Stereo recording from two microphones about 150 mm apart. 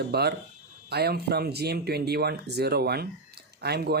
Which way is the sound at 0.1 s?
90° right.